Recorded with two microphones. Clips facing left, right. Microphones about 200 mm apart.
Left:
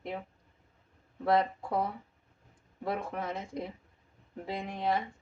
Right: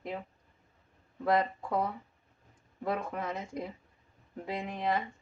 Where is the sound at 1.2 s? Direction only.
30° left (ahead or behind).